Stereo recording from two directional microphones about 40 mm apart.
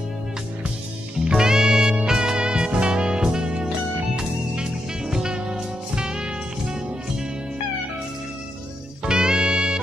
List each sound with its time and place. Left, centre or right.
1.2 s music: centre
9.0 s music: right